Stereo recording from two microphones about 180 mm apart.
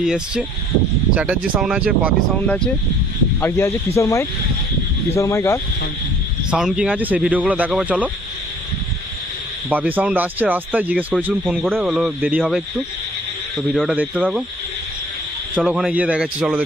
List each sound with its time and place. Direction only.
0.0 s speech: 5° right (ahead or behind)
3.4 s speech: 15° left (ahead or behind)
6.5 s speech: 5° right (ahead or behind)
9.8 s speech: 5° right (ahead or behind)
15.5 s speech: 5° right (ahead or behind)